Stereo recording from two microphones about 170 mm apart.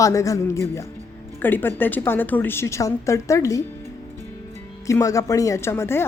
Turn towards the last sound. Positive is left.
turn(degrees=15)  # may be behind; listen again after turning